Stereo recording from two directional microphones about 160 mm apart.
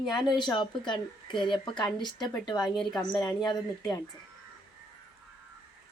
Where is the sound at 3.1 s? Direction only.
25° left (ahead or behind).